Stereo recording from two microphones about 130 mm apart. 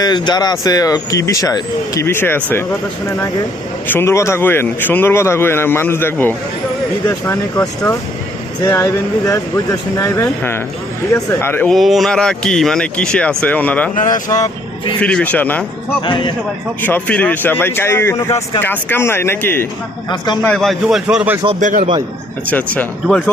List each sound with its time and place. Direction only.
0.0 s speech: 30° left (ahead or behind); by 2.6 s 15° left (ahead or behind)
3.8 s speech: 15° left (ahead or behind)
8.6 s speech: 20° left (ahead or behind)
11.7 s speech: centre (ahead or behind)
13.9 s speech: 90° left
15.0 s speech: 10° left (ahead or behind)
16.0 s a man's voice: 40° left (ahead or behind)
16.8 s speech: 15° left (ahead or behind)
20.1 s a man's voice: 35° left (ahead or behind)
20.4 s a man's voice: 5° left (ahead or behind)
21.6 s a man's voice: 90° right
22.4 s speech: 10° left (ahead or behind)